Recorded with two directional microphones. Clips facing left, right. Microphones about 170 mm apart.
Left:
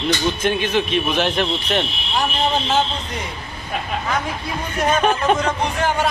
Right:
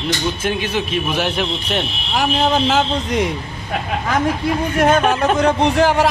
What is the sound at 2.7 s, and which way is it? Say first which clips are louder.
Speech: right 3 dB; 90° right.